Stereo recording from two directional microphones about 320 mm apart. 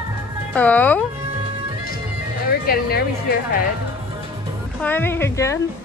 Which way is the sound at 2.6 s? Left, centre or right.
Left.